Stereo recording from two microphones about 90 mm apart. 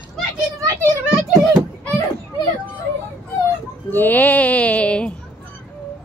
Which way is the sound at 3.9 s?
20° left (ahead or behind).